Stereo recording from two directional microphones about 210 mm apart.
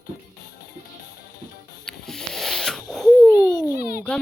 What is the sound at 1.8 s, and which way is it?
Wheeze, 5° left (ahead or behind).